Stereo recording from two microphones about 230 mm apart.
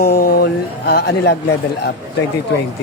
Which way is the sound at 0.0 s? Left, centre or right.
Left.